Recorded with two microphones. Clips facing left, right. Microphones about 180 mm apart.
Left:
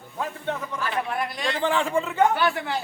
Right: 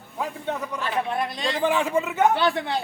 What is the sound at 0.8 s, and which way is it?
A man's voice, 25° right (ahead or behind).